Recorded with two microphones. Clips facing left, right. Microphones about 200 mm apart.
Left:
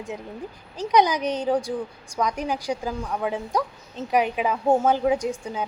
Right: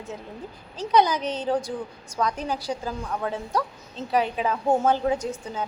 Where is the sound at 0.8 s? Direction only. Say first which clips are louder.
Left 1 dB; 15° left (ahead or behind).